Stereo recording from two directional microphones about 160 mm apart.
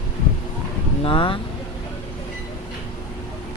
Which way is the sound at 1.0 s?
30° left (ahead or behind).